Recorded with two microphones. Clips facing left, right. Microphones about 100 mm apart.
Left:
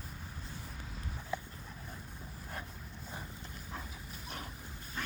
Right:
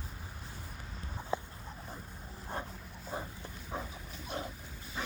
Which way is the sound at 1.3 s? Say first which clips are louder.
Right 4 dB; 25° right (ahead or behind).